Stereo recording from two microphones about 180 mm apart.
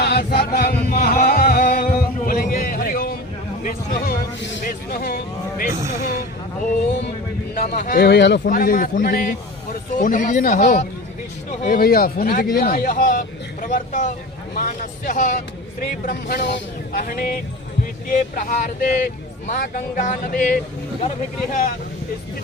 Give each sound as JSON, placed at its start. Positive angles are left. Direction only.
{"t": 0.0, "sound": "chant", "side_deg": 65}
{"t": 1.0, "sound": "a sound", "side_deg": 55}
{"t": 4.4, "sound": "music", "side_deg": 85}
{"t": 4.9, "sound": "a sound", "side_deg": 55}
{"t": 5.9, "sound": "speech", "side_deg": 45}
{"t": 7.5, "sound": "speech", "side_deg": 50}
{"t": 8.0, "sound": "speech", "side_deg": 70}
{"t": 8.4, "sound": "speech", "side_deg": 50}
{"t": 17.0, "sound": "speech", "side_deg": 55}
{"t": 21.5, "sound": "speech", "side_deg": 50}